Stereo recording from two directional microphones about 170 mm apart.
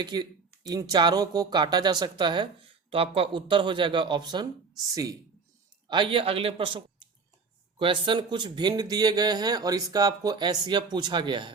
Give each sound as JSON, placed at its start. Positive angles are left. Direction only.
{"t": 0.0, "sound": "speech", "side_deg": -25}
{"t": 5.9, "sound": "a man's voice", "side_deg": -30}